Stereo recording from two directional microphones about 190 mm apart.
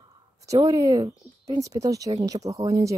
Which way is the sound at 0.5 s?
15° right (ahead or behind).